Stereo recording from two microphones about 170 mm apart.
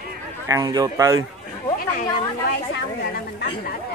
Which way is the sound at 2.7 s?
75° left (ahead or behind).